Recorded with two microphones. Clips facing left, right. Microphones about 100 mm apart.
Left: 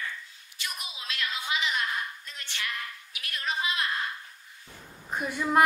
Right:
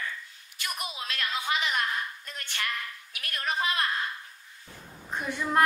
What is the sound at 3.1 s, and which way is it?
Speech, 50° right (ahead or behind).